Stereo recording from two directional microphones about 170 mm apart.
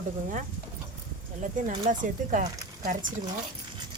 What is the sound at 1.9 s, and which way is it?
Speech, 50° right (ahead or behind).